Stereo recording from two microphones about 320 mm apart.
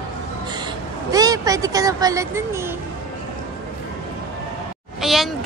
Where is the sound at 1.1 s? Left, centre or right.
Centre.